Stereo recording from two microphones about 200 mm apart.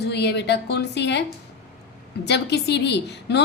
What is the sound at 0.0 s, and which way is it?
A woman's voice, 55° left (ahead or behind).